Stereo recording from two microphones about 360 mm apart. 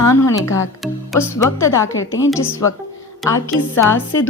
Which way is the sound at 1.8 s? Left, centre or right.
Left.